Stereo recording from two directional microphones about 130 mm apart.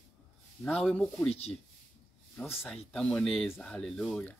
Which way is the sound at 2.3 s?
15° left (ahead or behind).